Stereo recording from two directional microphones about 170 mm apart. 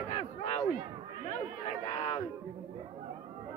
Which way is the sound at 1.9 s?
35° left (ahead or behind).